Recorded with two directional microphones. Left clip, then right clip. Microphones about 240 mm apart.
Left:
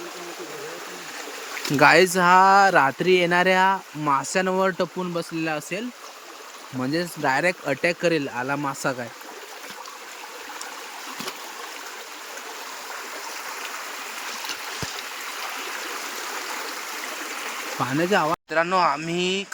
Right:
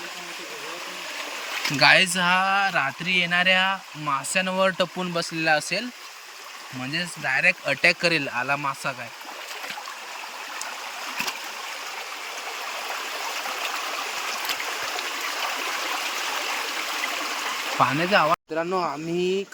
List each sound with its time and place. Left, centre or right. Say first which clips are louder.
1.8 s speech: left 2 dB; left
6.9 s speech: left 2 dB; left
7.6 s speech: right 2 dB; centre
17.7 s speech: right 2 dB; centre